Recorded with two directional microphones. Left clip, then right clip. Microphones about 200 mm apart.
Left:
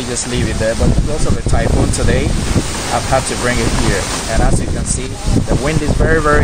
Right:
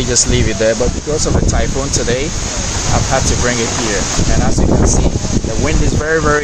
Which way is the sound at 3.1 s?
5° right (ahead or behind).